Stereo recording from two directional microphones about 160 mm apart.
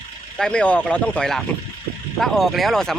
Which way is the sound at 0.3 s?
5° left (ahead or behind).